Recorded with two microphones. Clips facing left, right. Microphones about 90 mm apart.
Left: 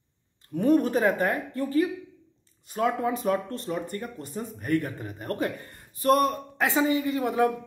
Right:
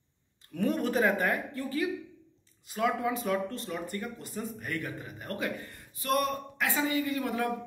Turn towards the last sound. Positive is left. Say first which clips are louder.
# left 6 dB
turn(degrees=20)  # may be behind; listen again after turning